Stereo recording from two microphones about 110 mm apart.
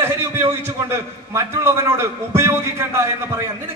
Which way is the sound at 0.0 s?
25° right (ahead or behind).